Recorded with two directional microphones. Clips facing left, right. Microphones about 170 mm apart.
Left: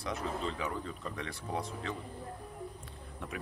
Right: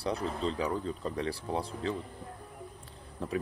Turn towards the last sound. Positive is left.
turn(degrees=-35)  # may be behind; listen again after turning